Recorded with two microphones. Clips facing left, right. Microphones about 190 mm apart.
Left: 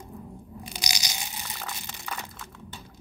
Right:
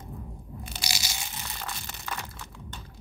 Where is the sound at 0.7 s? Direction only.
15° left (ahead or behind).